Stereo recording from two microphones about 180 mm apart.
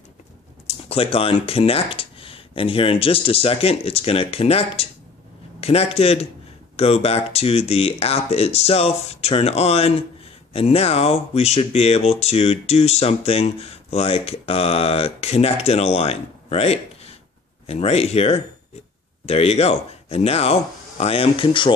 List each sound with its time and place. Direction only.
0.7 s speech: 35° left (ahead or behind)